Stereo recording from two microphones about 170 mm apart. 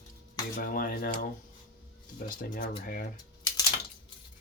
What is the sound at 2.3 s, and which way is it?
Speech, 50° left (ahead or behind).